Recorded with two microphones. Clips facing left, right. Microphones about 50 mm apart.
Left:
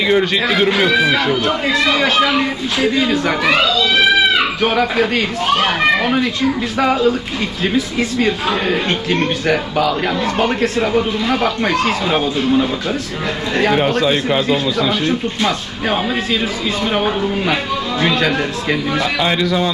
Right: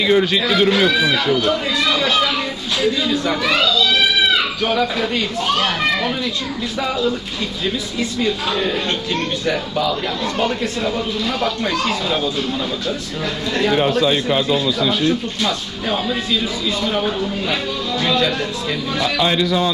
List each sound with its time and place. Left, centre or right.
0.1 s speech: left
4.3 s a sound: left
4.7 s speech: left
5.5 s a child's voice: left
6.7 s speech: left
9.5 s speech: left
10.8 s speech: left
18.0 s speech: left